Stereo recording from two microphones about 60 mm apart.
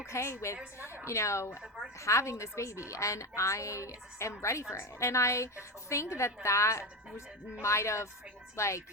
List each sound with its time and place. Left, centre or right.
0.0 s a woman's voice: left